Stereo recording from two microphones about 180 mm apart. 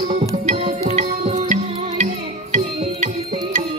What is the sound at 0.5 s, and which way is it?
Music, 40° right (ahead or behind).